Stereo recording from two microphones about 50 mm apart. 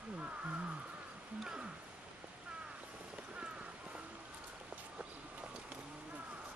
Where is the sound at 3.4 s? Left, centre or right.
Right.